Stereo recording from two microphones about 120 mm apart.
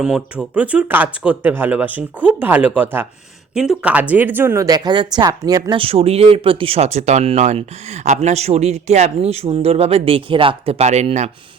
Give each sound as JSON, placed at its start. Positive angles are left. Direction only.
{"t": 0.0, "sound": "speech", "side_deg": -5}
{"t": 3.5, "sound": "speech", "side_deg": -5}
{"t": 5.7, "sound": "speech", "side_deg": -50}
{"t": 8.0, "sound": "speech", "side_deg": -75}